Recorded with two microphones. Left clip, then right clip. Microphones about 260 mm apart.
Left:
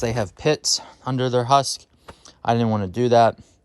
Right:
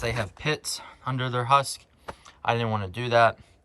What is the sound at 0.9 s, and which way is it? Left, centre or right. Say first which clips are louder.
Speech: left 7 dB; centre.